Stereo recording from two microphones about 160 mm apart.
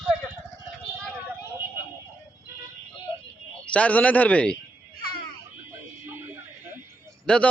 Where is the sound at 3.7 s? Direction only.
10° left (ahead or behind).